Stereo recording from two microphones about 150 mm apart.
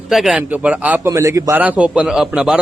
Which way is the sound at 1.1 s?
20° right (ahead or behind).